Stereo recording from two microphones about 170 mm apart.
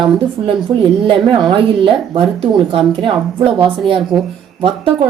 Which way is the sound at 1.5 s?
30° right (ahead or behind).